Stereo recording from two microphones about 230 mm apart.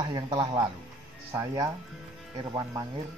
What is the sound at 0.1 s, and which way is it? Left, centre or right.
Speech, centre.